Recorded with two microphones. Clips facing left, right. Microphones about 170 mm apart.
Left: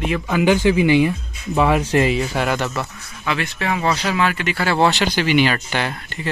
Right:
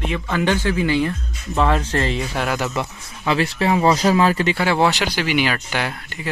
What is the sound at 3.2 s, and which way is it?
Speech, 30° right (ahead or behind).